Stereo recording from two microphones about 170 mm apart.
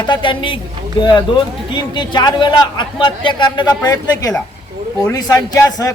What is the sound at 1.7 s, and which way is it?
A man's voice, 25° left (ahead or behind).